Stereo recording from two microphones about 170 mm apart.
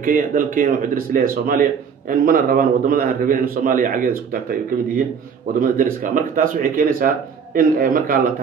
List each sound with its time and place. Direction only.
0.0 s a man's voice: 50° right (ahead or behind)
5.6 s a man's voice: 55° right (ahead or behind)